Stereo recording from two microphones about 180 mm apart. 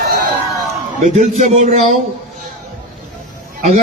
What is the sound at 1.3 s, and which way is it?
Speech, 40° right (ahead or behind).